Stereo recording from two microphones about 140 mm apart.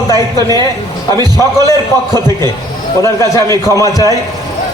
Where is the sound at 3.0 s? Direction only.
20° left (ahead or behind).